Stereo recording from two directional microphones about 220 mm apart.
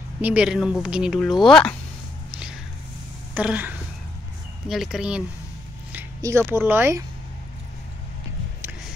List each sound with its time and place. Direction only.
0.2 s speech: 5° right (ahead or behind)
3.3 s a sound: 5° right (ahead or behind)
4.6 s speech: centre (ahead or behind)